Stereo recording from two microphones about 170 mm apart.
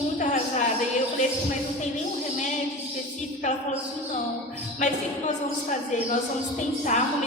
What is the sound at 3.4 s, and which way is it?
Speech, 45° left (ahead or behind).